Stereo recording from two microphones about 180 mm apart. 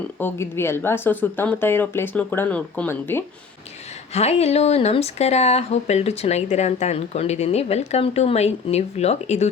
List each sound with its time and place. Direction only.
0.2 s speech: 10° left (ahead or behind)
4.1 s speech: 35° left (ahead or behind)